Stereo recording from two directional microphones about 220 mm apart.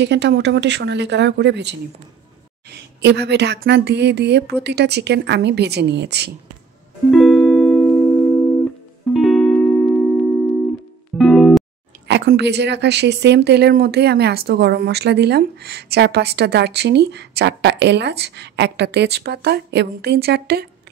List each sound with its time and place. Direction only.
0.0 s speech: 50° right (ahead or behind)
7.1 s music: centre (ahead or behind)
9.1 s music: centre (ahead or behind)
12.1 s speech: 50° right (ahead or behind)